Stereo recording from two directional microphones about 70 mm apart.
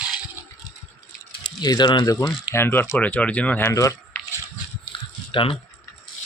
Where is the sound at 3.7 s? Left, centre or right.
Left.